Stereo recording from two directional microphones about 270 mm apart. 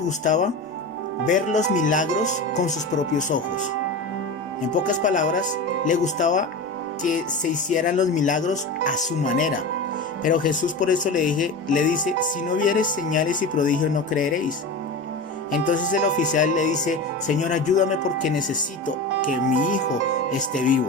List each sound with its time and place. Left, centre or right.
0.3 s speech: left
4.7 s speech: left
15.5 s speech: left